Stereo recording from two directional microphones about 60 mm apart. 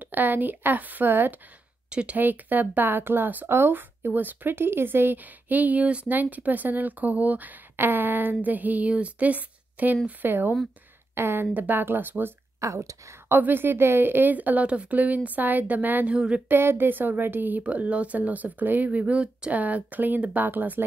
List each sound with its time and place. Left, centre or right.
0.0 s speech: right
1.9 s speech: centre
2.1 s speech: right
12.5 s a woman's voice: right
13.3 s speech: right
16.2 s speech: centre
16.4 s speech: right; by 19.5 s centre
19.5 s speech: right